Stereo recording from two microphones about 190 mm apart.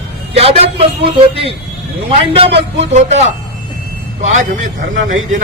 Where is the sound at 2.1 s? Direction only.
30° right (ahead or behind).